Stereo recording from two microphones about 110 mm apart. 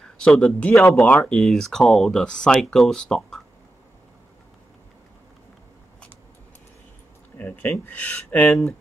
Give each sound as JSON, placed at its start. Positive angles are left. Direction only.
{"t": 0.2, "sound": "speech", "side_deg": 5}
{"t": 7.3, "sound": "speech", "side_deg": 15}